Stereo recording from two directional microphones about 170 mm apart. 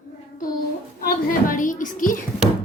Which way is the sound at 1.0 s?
55° left (ahead or behind).